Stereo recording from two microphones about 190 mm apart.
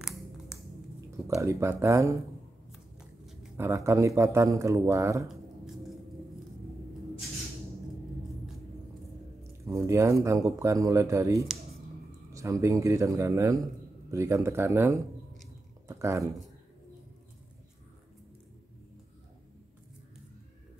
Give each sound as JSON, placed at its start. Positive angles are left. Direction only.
{"t": 1.2, "sound": "speech", "side_deg": -15}
{"t": 2.7, "sound": "shuffling cards", "side_deg": 0}
{"t": 3.5, "sound": "speech", "side_deg": -15}
{"t": 9.4, "sound": "speech", "side_deg": -15}